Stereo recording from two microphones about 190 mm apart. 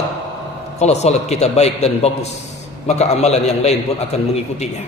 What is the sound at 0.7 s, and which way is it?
A man's voice, 35° left (ahead or behind).